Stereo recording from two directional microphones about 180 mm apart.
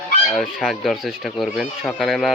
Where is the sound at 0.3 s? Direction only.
Centre (ahead or behind).